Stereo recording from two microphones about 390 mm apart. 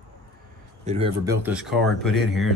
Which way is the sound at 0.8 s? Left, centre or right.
Centre.